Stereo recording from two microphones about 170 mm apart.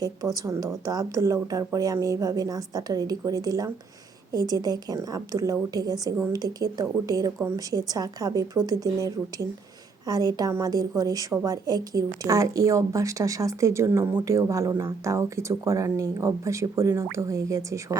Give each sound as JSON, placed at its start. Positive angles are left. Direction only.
{"t": 0.3, "sound": "a woman's voice", "side_deg": -20}